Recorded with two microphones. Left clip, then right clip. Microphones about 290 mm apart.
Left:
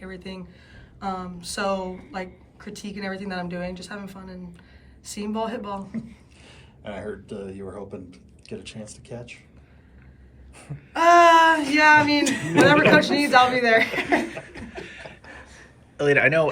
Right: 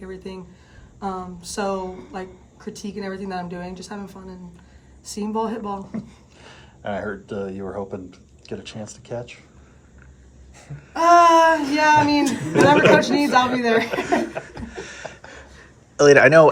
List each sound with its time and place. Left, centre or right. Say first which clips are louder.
0.0 s a woman's voice: right 3 dB; centre
6.5 s speech: right 8 dB; right
10.9 s a sound: right 1 dB; centre
12.6 s a woman's voice: right 2 dB; centre
16.0 s a woman's voice: right 7 dB; centre